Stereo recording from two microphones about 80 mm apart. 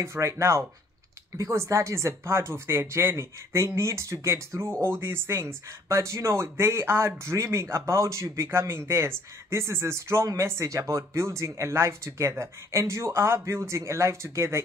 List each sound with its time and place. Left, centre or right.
0.0 s speech: right